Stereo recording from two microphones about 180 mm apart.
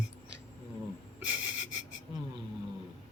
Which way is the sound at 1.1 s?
10° right (ahead or behind).